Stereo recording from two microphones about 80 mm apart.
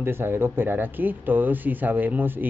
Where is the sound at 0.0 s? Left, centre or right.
Right.